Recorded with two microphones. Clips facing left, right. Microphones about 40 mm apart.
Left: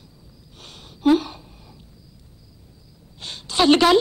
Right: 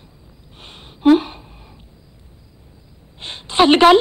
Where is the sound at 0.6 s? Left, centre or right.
Right.